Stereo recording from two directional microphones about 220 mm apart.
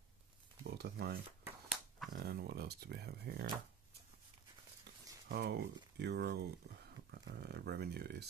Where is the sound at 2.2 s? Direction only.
45° right (ahead or behind).